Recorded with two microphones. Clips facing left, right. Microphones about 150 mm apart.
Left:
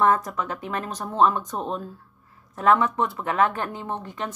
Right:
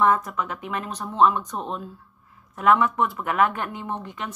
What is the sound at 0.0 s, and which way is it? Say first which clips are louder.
Speech: even; 35° left (ahead or behind).